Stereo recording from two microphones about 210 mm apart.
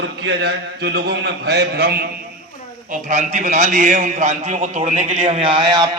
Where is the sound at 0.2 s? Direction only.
55° right (ahead or behind).